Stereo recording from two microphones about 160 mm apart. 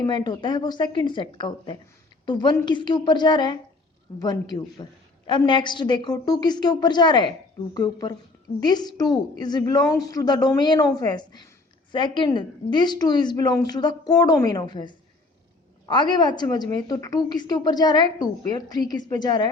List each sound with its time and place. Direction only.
0.0 s a woman's voice: 25° left (ahead or behind)